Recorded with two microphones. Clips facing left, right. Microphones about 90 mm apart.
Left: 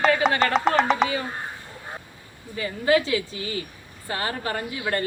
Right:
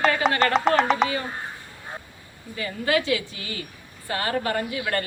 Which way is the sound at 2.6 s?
25° left (ahead or behind).